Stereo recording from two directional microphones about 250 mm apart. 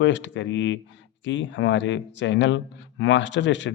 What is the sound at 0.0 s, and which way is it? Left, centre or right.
Speech, left.